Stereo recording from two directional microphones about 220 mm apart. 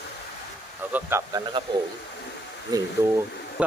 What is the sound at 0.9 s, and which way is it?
Speech, 10° right (ahead or behind).